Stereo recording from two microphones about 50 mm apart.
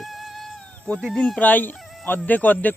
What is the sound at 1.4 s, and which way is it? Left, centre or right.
Speech, left.